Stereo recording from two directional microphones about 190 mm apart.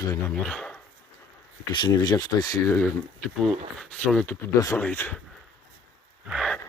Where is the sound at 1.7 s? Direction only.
25° left (ahead or behind).